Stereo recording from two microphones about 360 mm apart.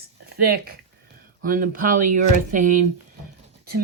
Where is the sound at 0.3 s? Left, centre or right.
Right.